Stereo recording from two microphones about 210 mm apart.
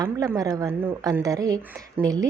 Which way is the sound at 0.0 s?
15° right (ahead or behind).